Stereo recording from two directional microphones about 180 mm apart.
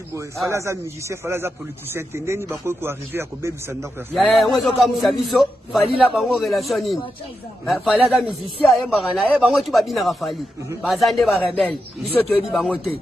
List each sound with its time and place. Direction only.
0.5 s a man's voice: 15° right (ahead or behind)
4.1 s a man's voice: 5° left (ahead or behind)